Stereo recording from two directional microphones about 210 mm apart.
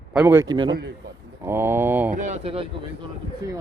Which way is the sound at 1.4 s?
10° right (ahead or behind).